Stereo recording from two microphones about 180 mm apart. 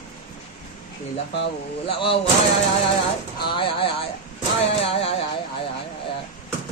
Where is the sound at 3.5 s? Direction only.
30° left (ahead or behind).